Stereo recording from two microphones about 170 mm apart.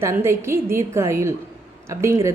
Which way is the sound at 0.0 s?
15° right (ahead or behind).